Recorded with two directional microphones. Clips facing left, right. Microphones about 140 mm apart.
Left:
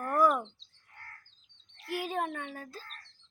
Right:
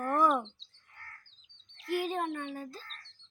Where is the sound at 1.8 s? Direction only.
5° left (ahead or behind).